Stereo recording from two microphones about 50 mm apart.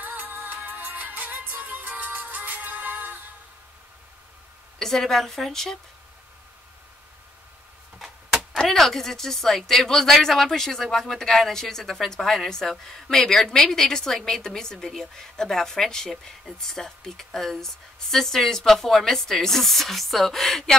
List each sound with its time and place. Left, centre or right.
0.0 s music: right
4.7 s a woman's voice: centre
8.0 s a sound: centre
8.5 s a woman's voice: centre